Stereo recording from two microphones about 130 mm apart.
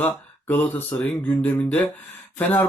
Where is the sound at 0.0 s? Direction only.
15° left (ahead or behind).